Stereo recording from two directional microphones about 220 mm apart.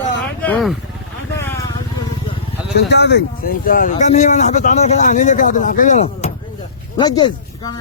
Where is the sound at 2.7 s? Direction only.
50° left (ahead or behind); by 6.3 s 30° left (ahead or behind).